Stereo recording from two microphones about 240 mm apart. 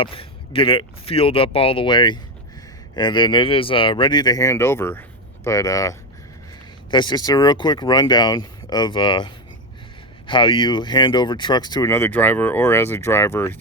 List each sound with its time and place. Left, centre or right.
0.0 s speech: left